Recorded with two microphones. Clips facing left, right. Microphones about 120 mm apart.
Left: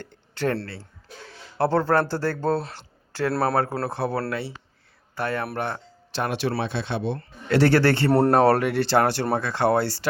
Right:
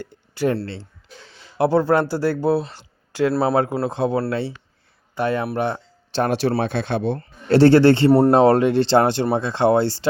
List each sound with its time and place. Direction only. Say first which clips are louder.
0.0 s speech: right 4 dB; 10° right (ahead or behind)
0.6 s speech: right 6 dB; 25° right (ahead or behind)
1.5 s speech: right 4 dB; 15° right (ahead or behind)
2.7 s a sound: right 7 dB; 15° right (ahead or behind)
3.4 s speech: right 4 dB; 15° right (ahead or behind)
6.2 s a man's voice: right 5 dB; 35° right (ahead or behind)